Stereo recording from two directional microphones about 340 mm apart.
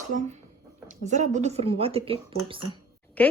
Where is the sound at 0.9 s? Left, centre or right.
Right.